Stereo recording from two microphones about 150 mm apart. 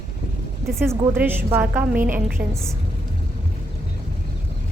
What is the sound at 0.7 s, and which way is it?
A woman's voice, 15° right (ahead or behind).